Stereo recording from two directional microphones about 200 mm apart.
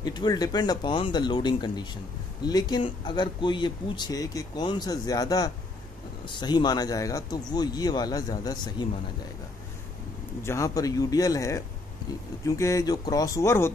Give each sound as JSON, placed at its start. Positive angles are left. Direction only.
{"t": 0.0, "sound": "speech", "side_deg": 20}
{"t": 10.4, "sound": "speech", "side_deg": 15}